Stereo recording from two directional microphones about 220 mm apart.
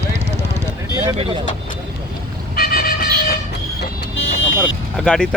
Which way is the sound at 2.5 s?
45° left (ahead or behind).